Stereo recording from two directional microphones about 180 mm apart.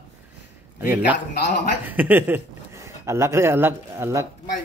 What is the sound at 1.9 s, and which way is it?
Speech, 10° right (ahead or behind).